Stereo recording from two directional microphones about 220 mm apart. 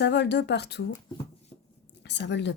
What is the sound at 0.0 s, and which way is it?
Speech, 50° left (ahead or behind).